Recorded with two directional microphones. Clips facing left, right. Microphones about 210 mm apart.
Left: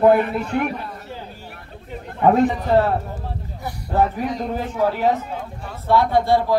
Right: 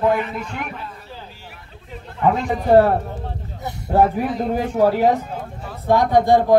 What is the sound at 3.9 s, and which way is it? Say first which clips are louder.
Speech: right 3 dB; 10° right (ahead or behind).